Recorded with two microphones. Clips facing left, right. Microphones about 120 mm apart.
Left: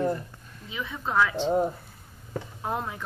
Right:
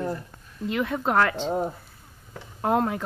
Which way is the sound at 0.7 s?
70° right (ahead or behind).